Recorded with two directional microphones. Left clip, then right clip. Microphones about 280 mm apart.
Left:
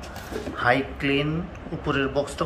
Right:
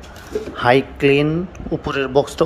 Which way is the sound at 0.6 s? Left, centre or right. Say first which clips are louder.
Right 7 dB; right.